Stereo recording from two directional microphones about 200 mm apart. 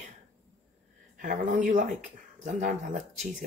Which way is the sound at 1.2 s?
40° right (ahead or behind).